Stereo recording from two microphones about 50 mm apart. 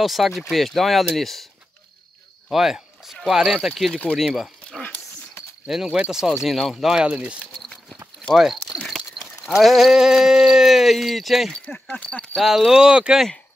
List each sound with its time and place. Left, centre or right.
0.0 s speech: centre
2.5 s speech: centre
5.7 s speech: centre
7.5 s a sound: centre
8.4 s speech: centre
8.8 s sheep: centre
11.9 s speech: left
12.4 s speech: centre